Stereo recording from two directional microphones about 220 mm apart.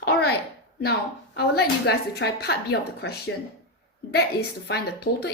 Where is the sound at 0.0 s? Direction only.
45° left (ahead or behind).